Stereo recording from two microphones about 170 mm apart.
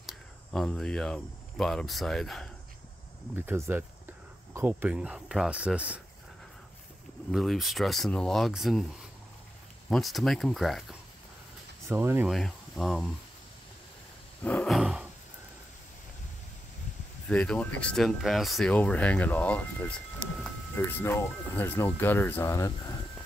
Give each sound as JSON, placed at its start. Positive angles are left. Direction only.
{"t": 0.0, "sound": "speech", "side_deg": 5}
{"t": 3.3, "sound": "speech", "side_deg": -15}
{"t": 7.2, "sound": "speech", "side_deg": 0}
{"t": 9.8, "sound": "speech", "side_deg": 0}
{"t": 11.9, "sound": "speech", "side_deg": -15}
{"t": 12.3, "sound": "speech", "side_deg": 0}
{"t": 14.4, "sound": "a sound", "side_deg": 5}
{"t": 17.3, "sound": "speech", "side_deg": 5}